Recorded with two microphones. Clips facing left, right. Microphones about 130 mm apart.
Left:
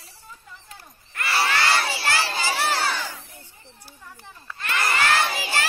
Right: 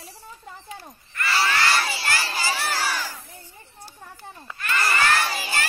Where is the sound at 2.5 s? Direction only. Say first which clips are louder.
Left 5 dB; 75° left (ahead or behind).